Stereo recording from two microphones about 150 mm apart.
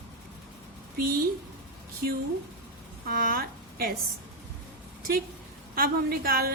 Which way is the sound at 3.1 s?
70° right (ahead or behind).